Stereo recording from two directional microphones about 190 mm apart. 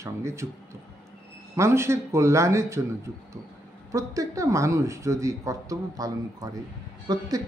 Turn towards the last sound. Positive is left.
turn(degrees=-20)  # may be behind; listen again after turning